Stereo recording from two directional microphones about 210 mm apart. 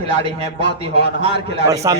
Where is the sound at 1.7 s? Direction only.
15° right (ahead or behind).